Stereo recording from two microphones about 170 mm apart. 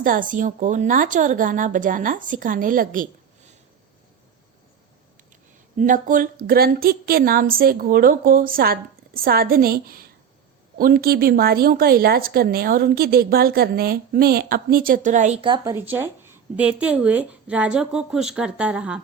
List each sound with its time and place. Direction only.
0.0 s speech: 50° right (ahead or behind)
5.7 s a woman's voice: 50° right (ahead or behind)
15.4 s speech: 30° right (ahead or behind)
15.7 s speech: 10° right (ahead or behind)